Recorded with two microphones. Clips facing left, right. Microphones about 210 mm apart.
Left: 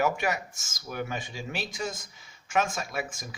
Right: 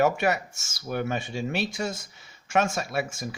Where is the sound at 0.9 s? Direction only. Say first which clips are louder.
Right 5 dB; 60° right (ahead or behind).